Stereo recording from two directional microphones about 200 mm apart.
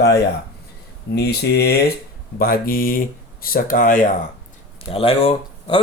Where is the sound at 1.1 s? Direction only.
50° left (ahead or behind).